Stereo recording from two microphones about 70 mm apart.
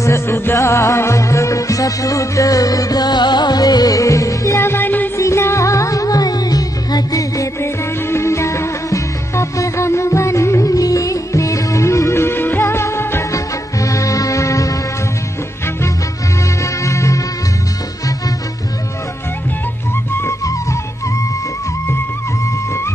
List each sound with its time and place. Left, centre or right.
0.0 s music: left
4.6 s music: left
5.1 s music: left
7.6 s music: left
13.3 s music: left
16.8 s music: left